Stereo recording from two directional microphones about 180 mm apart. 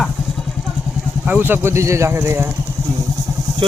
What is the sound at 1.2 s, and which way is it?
Speech, 10° right (ahead or behind).